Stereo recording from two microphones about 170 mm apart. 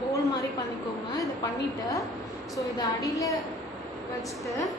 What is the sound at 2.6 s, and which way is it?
Speech, 20° left (ahead or behind).